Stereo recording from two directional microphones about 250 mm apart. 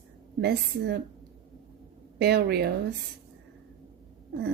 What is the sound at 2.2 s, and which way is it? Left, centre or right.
Speech, right.